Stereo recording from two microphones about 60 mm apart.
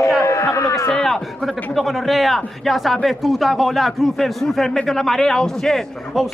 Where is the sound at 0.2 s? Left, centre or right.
Left.